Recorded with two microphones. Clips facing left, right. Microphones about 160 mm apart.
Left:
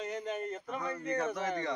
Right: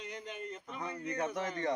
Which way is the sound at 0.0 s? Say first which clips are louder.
Left 7 dB; 45° left (ahead or behind).